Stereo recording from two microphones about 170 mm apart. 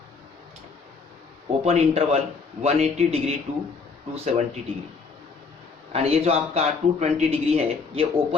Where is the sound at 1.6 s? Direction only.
40° right (ahead or behind).